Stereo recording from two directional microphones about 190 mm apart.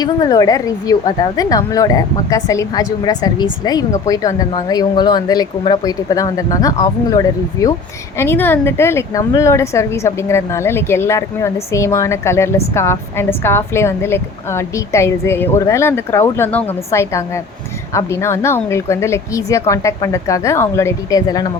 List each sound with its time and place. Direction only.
0.0 s a woman's voice: 20° left (ahead or behind)